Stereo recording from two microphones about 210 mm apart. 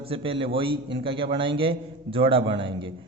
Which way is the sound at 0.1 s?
25° right (ahead or behind).